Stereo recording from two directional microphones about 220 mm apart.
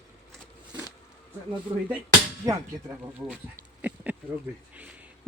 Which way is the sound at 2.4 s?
15° right (ahead or behind).